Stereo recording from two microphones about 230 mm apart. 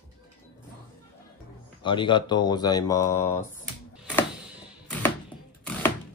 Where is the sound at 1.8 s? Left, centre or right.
Left.